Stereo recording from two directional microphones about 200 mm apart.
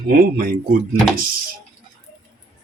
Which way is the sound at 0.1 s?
45° right (ahead or behind).